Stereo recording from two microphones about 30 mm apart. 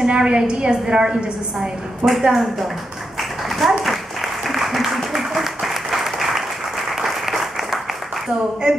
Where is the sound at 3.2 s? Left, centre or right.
Centre.